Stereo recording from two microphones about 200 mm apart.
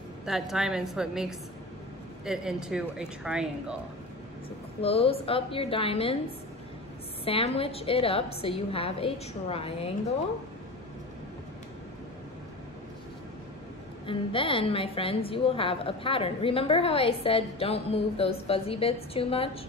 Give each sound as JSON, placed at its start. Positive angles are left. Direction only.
{"t": 0.2, "sound": "speech", "side_deg": 0}
{"t": 4.8, "sound": "a woman's voice", "side_deg": 30}
{"t": 7.2, "sound": "a woman's voice", "side_deg": 30}
{"t": 14.0, "sound": "a woman's voice", "side_deg": 25}